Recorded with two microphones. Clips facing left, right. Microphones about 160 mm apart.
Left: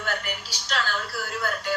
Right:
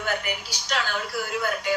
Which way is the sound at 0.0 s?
10° right (ahead or behind).